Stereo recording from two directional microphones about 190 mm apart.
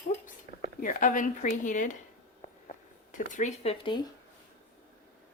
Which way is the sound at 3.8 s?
25° left (ahead or behind).